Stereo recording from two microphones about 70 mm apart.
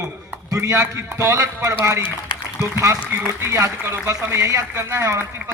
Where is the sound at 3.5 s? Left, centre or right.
Right.